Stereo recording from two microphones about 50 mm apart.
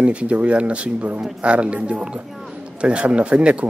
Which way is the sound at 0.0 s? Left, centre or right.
Right.